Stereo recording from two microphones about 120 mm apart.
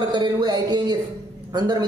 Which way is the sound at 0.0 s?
35° right (ahead or behind).